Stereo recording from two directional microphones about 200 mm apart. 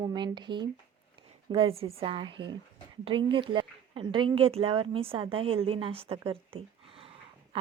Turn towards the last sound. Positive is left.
turn(degrees=-30)  # may be behind; listen again after turning